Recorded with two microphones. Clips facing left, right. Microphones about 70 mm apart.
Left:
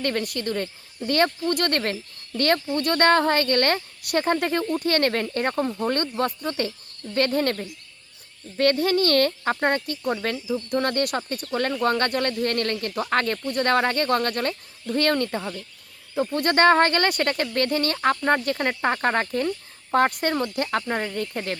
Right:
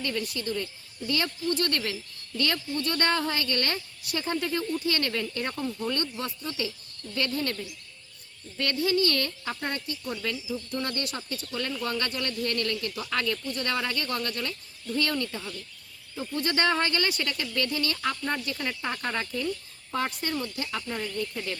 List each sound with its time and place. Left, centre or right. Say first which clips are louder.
0.0 s speech: left 5 dB; left